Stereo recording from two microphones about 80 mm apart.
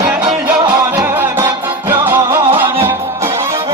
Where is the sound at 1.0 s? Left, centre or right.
Right.